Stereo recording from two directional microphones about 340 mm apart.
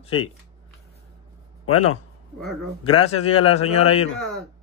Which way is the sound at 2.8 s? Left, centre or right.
Centre.